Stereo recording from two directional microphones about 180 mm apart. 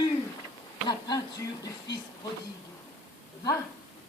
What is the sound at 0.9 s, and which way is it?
Speech, 20° left (ahead or behind).